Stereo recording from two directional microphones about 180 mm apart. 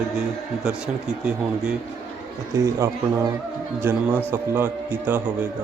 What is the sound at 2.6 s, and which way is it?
A man's voice, 15° right (ahead or behind).